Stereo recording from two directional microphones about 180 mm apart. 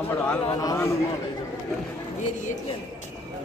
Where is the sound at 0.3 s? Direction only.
20° left (ahead or behind).